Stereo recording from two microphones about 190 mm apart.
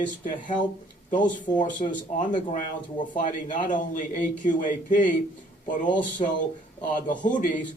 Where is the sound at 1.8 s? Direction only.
40° left (ahead or behind).